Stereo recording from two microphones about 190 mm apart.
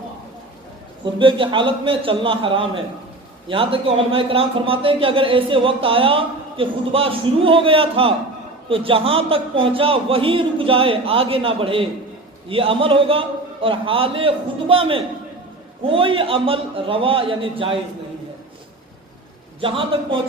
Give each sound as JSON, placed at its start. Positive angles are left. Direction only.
{"t": 1.0, "sound": "a man's voice", "side_deg": -25}
{"t": 19.6, "sound": "a man's voice", "side_deg": -30}